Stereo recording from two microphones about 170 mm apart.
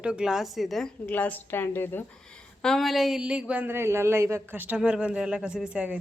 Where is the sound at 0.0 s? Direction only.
5° right (ahead or behind).